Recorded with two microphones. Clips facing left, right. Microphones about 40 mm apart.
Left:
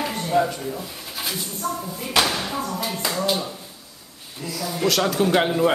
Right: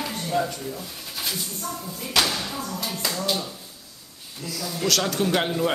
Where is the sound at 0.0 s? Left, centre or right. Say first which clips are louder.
Left 4 dB; centre.